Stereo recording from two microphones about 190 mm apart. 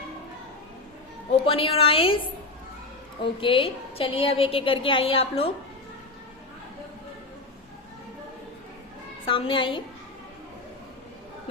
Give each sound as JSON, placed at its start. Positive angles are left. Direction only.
{"t": 1.5, "sound": "a woman's voice", "side_deg": 30}
{"t": 3.4, "sound": "a woman's voice", "side_deg": 30}
{"t": 9.2, "sound": "a woman's voice", "side_deg": 25}